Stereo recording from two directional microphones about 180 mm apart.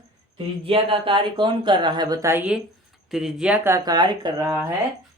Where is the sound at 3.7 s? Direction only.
20° right (ahead or behind).